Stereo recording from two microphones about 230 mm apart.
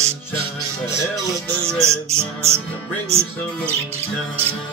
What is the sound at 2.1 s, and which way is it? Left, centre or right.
Speech, centre.